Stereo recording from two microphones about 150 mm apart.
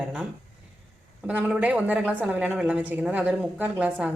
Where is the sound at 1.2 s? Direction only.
5° right (ahead or behind).